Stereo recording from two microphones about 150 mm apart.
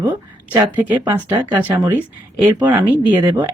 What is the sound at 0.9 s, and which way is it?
Speech, 20° right (ahead or behind).